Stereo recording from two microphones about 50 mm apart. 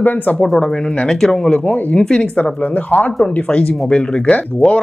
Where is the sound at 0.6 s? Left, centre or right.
Centre.